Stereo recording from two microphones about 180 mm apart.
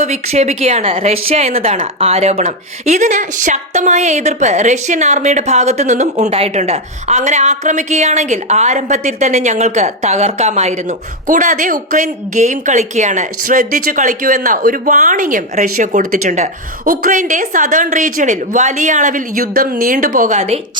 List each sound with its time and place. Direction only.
0.0 s a woman's voice: 40° right (ahead or behind)